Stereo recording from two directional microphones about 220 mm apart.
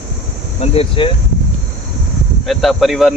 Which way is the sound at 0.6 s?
25° left (ahead or behind).